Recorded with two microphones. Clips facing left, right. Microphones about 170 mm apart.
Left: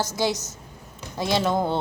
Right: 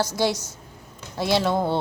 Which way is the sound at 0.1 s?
45° left (ahead or behind).